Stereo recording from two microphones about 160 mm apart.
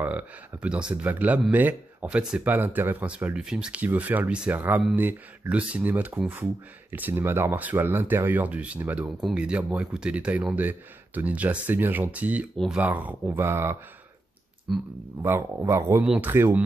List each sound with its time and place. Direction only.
0.0 s speech: 10° right (ahead or behind)
14.7 s speech: centre (ahead or behind)
15.2 s speech: 15° right (ahead or behind)